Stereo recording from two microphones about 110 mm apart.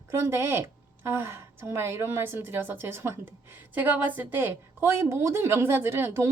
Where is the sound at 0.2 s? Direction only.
25° right (ahead or behind).